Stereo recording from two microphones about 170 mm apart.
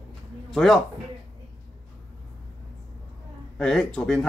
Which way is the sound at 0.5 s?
Centre (ahead or behind).